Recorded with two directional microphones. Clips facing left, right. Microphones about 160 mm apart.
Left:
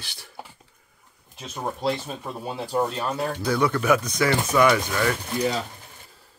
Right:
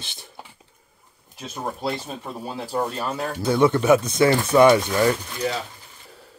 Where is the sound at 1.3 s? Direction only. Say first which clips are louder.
Even; centre (ahead or behind).